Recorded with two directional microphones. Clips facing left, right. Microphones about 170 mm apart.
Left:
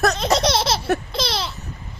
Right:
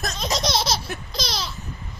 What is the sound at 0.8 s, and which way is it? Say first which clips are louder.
Baby laughter: left 9 dB; 65° left (ahead or behind).